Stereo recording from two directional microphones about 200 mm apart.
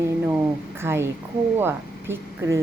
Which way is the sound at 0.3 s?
10° right (ahead or behind).